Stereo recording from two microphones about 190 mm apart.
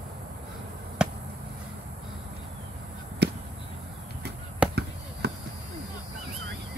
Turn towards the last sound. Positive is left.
turn(degrees=-60)  # may be behind; listen again after turning